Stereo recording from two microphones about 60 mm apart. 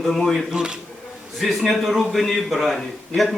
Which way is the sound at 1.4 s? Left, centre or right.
Centre.